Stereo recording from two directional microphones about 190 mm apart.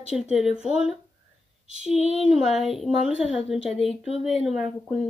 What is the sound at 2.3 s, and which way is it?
Speech, centre (ahead or behind).